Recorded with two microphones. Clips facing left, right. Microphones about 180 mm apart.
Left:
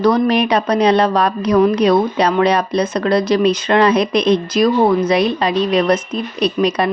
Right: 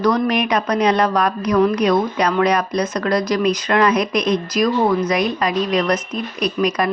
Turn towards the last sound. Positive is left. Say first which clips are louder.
# left 3 dB
turn(degrees=30)  # may be behind; listen again after turning